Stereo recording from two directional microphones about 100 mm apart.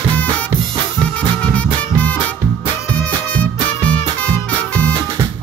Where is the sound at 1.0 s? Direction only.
10° left (ahead or behind).